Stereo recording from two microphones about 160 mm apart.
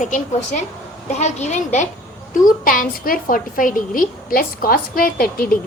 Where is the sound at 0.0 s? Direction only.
50° left (ahead or behind).